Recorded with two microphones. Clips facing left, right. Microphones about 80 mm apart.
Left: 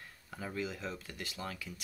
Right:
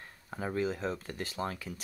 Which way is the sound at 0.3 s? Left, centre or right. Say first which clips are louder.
Right 7 dB; right.